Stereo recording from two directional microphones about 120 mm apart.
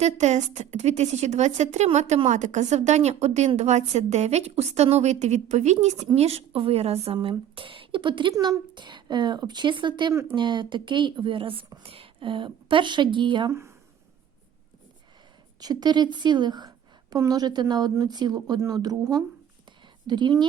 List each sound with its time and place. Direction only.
0.0 s a woman's voice: 75° right (ahead or behind)
6.1 s a woman's voice: 60° right (ahead or behind); by 13.5 s 40° right (ahead or behind)
13.5 s speech: 25° right (ahead or behind)
15.6 s a woman's voice: 35° right (ahead or behind)